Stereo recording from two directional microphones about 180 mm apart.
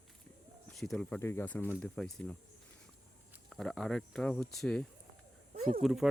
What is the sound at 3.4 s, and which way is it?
Speech, centre (ahead or behind).